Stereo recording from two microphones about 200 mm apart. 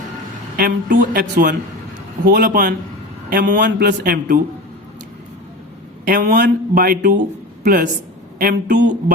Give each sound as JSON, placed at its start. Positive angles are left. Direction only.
{"t": 0.5, "sound": "a man's voice", "side_deg": -45}
{"t": 6.1, "sound": "a man's voice", "side_deg": -40}